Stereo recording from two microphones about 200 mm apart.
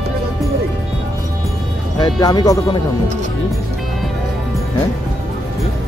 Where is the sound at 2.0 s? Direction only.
20° left (ahead or behind).